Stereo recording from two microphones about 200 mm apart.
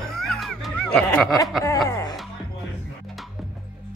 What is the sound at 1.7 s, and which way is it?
Speech, 15° left (ahead or behind).